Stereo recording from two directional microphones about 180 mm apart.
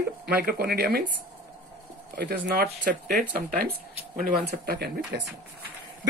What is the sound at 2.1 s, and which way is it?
Speech, 55° right (ahead or behind).